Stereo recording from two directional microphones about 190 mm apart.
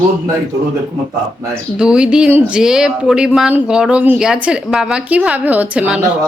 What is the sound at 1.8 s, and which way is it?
A woman's voice, 5° right (ahead or behind).